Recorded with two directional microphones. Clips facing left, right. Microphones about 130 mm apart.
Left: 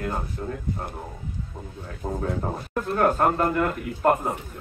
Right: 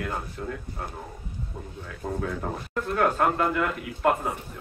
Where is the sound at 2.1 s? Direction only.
35° left (ahead or behind).